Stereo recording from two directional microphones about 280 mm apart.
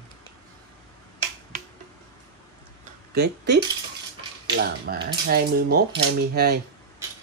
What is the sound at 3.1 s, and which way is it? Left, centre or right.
Speech, right.